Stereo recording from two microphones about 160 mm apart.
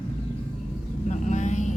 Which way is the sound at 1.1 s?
45° left (ahead or behind).